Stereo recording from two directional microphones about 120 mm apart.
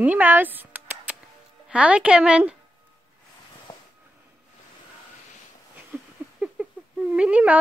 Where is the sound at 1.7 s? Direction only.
10° right (ahead or behind).